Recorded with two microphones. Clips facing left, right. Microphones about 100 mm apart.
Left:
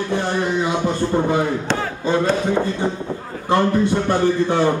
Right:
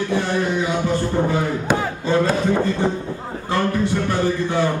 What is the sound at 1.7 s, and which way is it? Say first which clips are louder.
Speech: right 2 dB; 10° right (ahead or behind).